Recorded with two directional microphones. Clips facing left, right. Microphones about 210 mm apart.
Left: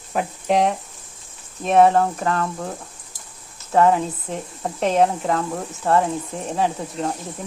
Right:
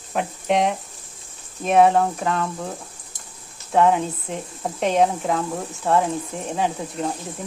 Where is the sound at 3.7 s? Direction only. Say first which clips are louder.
Left 1 dB; centre (ahead or behind).